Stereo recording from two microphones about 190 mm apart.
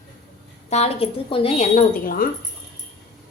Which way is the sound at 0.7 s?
35° left (ahead or behind).